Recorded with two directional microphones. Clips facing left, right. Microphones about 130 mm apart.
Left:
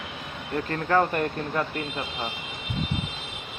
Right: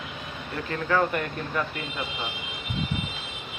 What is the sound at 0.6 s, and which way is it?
Speech, 40° left (ahead or behind).